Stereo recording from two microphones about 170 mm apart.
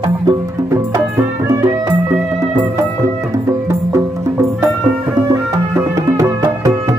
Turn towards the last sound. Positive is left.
turn(degrees=-20)  # may be behind; listen again after turning